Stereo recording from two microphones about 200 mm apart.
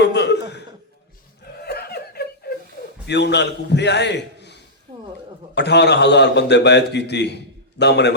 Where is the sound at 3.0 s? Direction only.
60° left (ahead or behind).